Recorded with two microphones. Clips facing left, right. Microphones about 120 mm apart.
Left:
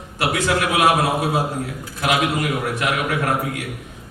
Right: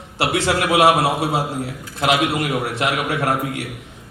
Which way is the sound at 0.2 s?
30° right (ahead or behind).